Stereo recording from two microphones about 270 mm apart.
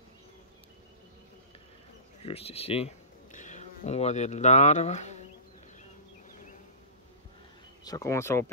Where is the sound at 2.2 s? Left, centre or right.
Left.